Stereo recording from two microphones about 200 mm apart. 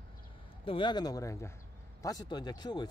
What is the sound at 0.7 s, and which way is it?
A man's voice, 25° left (ahead or behind).